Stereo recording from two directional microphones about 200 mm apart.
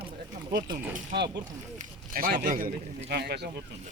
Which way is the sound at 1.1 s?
55° right (ahead or behind).